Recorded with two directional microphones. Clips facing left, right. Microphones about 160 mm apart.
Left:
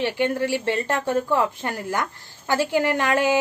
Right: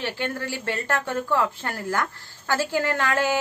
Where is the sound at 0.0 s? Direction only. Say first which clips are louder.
Left 7 dB; 15° left (ahead or behind).